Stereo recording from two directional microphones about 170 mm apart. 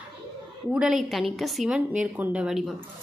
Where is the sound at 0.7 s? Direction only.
5° right (ahead or behind).